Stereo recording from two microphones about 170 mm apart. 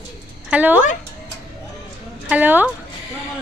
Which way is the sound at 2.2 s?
10° right (ahead or behind).